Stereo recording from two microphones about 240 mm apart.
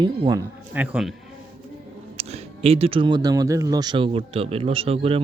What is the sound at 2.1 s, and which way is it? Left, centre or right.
Speech, right.